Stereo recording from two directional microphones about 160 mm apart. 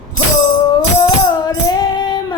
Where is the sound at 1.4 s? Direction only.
25° left (ahead or behind).